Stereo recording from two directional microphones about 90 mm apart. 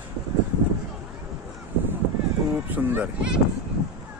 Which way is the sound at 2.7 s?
20° right (ahead or behind).